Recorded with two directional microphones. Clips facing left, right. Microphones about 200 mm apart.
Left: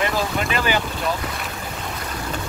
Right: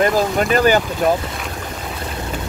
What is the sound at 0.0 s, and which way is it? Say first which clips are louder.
Speech: right 7 dB; 45° right (ahead or behind).